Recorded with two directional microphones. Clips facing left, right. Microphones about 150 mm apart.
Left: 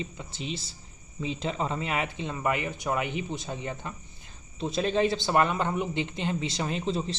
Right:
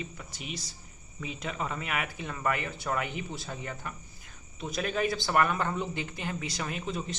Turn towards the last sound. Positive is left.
turn(degrees=30)  # may be behind; listen again after turning